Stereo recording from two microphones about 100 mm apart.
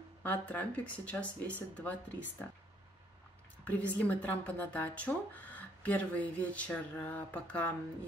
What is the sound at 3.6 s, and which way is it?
Speech, 15° left (ahead or behind).